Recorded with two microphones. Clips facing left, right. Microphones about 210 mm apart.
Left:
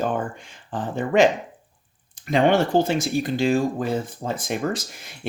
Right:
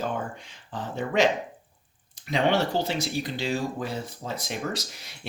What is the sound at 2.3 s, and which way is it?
Speech, 50° left (ahead or behind).